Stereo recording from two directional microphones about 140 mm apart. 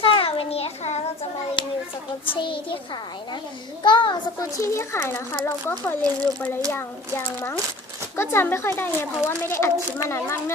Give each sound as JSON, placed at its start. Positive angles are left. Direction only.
{"t": 0.0, "sound": "a sound", "side_deg": 40}
{"t": 1.6, "sound": "a child's voice", "side_deg": 35}
{"t": 3.8, "sound": "a child's voice", "side_deg": 35}